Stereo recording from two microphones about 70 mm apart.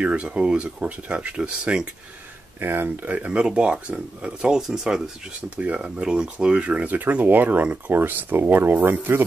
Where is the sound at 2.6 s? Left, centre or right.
Right; by 5.0 s centre.